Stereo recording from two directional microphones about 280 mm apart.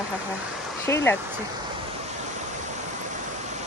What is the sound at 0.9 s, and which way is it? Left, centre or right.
Speech, centre.